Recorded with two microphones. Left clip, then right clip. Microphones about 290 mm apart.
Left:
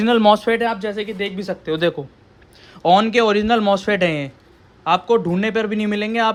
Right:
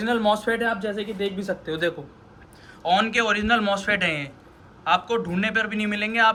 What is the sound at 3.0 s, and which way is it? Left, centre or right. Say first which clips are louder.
Speech: left 3 dB; centre.